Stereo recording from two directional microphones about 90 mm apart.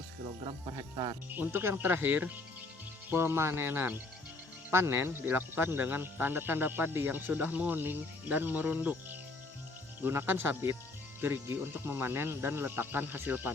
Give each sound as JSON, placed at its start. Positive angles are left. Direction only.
{"t": 1.3, "sound": "speech", "side_deg": -20}